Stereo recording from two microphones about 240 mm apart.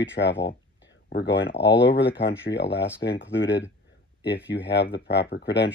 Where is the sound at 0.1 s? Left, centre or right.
Left.